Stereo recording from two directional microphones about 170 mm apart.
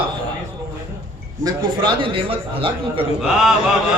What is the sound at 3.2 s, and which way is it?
Chant, 5° right (ahead or behind).